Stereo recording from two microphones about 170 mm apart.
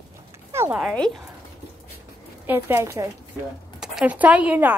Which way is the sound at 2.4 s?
15° right (ahead or behind).